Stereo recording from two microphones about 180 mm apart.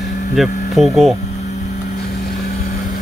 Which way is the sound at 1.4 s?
40° left (ahead or behind).